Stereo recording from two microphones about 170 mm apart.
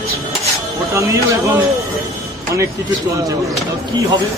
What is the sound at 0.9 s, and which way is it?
Speech, 20° right (ahead or behind).